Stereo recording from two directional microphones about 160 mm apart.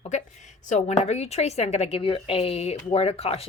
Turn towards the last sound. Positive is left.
turn(degrees=40)  # may be behind; listen again after turning